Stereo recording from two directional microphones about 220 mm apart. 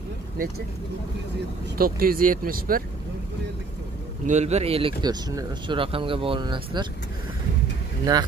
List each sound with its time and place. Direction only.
1.8 s speech: 40° right (ahead or behind)
4.3 s speech: 30° right (ahead or behind)
8.0 s speech: 15° right (ahead or behind)